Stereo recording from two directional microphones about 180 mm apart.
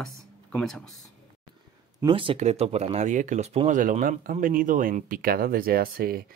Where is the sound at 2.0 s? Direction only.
30° right (ahead or behind).